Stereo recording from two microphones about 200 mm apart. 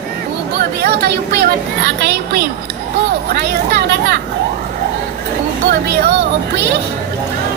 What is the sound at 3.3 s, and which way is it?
Speech, 55° right (ahead or behind).